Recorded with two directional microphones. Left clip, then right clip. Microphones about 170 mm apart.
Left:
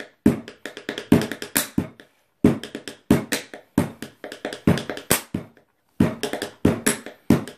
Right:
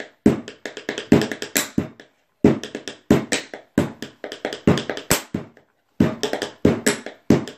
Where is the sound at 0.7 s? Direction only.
10° left (ahead or behind).